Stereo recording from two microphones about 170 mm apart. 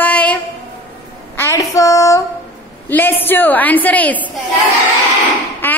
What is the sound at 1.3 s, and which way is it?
Child singing, 15° left (ahead or behind).